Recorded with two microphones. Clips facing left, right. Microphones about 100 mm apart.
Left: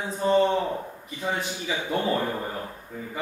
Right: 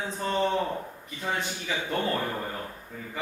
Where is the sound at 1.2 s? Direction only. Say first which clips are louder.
Left 2 dB; 10° left (ahead or behind).